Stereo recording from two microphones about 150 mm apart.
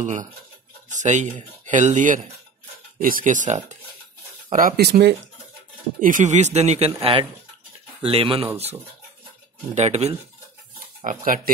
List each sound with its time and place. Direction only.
0.0 s speech: 55° right (ahead or behind)
3.0 s speech: 70° right (ahead or behind); by 3.7 s 50° right (ahead or behind)
4.5 s speech: 65° right (ahead or behind); by 5.0 s 90° right
5.9 s speech: 60° right (ahead or behind)
7.0 s speech: 35° right (ahead or behind)
9.8 s speech: 45° right (ahead or behind)
11.1 s speech: 65° right (ahead or behind)